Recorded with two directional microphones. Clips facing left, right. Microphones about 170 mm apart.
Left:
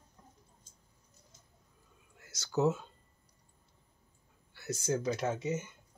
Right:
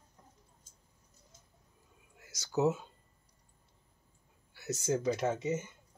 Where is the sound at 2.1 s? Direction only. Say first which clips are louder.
Even; 10° right (ahead or behind).